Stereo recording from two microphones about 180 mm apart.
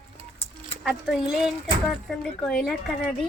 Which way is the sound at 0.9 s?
5° right (ahead or behind).